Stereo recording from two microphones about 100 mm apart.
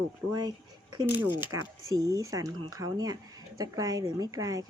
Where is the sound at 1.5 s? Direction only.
35° right (ahead or behind).